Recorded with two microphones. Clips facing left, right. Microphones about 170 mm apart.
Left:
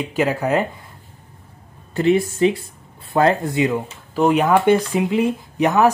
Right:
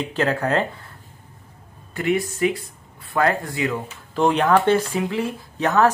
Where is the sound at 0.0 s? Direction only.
10° left (ahead or behind).